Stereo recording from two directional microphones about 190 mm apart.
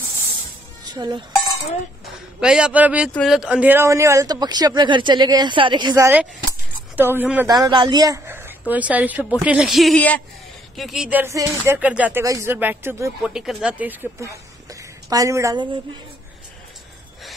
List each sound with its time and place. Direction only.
0.8 s speech: 20° right (ahead or behind)
2.4 s a man's voice: 5° right (ahead or behind)
7.5 s a woman's voice: 20° right (ahead or behind)
13.2 s speech: centre (ahead or behind); by 15.8 s 25° right (ahead or behind)